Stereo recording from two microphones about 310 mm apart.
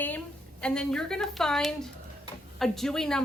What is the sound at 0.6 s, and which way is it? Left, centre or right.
A woman's voice, centre.